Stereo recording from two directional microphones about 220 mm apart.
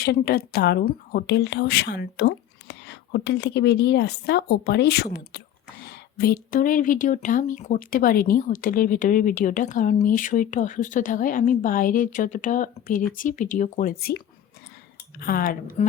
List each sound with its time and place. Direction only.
0.0 s speech: 45° left (ahead or behind)
15.2 s speech: 40° left (ahead or behind)